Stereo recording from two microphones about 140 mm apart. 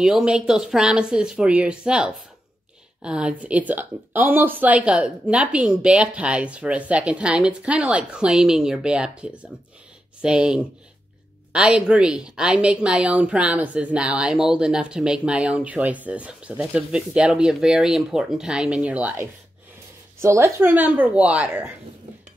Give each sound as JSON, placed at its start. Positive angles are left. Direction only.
{"t": 0.0, "sound": "a woman's voice", "side_deg": -5}